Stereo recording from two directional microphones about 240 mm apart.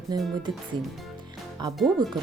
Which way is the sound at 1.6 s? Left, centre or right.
Centre.